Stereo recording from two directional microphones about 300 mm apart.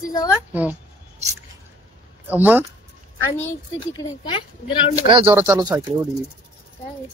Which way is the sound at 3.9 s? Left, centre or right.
Centre.